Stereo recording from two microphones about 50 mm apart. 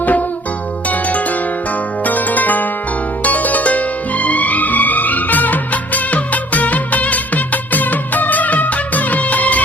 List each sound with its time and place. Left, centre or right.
0.0 s music: left